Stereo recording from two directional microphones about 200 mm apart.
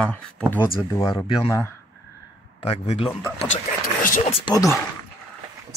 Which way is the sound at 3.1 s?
10° left (ahead or behind).